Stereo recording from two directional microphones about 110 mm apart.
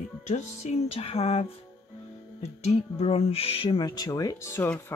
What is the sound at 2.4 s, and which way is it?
Music, 75° left (ahead or behind).